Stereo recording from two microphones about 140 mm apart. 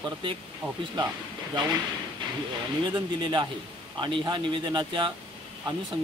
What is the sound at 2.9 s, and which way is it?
Speech, 30° right (ahead or behind).